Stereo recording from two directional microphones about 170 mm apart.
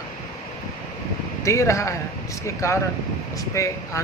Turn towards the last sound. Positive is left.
turn(degrees=15)  # may be behind; listen again after turning